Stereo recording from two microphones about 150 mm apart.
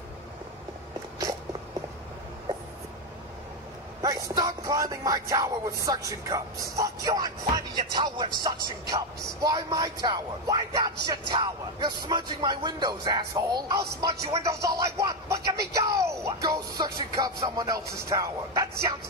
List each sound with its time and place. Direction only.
4.0 s music: 25° right (ahead or behind)